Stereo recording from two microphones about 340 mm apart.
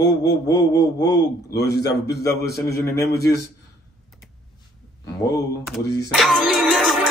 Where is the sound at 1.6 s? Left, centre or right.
Left.